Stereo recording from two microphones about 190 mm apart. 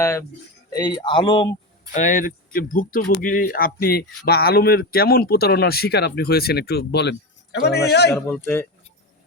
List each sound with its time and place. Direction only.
0.0 s speech: 15° left (ahead or behind)
1.9 s speech: 40° left (ahead or behind); by 8.1 s 60° left (ahead or behind)